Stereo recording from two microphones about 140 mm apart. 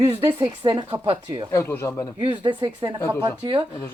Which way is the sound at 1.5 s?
15° left (ahead or behind).